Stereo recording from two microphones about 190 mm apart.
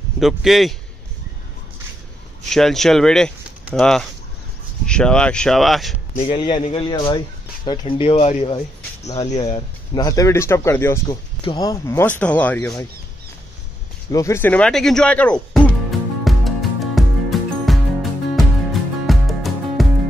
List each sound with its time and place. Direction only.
0.2 s speech: centre (ahead or behind)
2.5 s speech: centre (ahead or behind)
6.3 s speech: 25° left (ahead or behind)
9.9 s speech: 15° left (ahead or behind)
14.1 s music: 15° left (ahead or behind)